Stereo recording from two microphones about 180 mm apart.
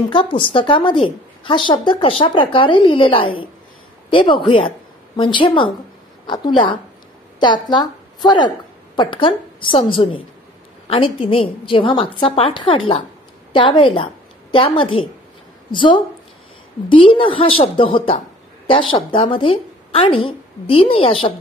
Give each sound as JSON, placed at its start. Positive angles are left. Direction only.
{"t": 0.1, "sound": "a woman's voice", "side_deg": 30}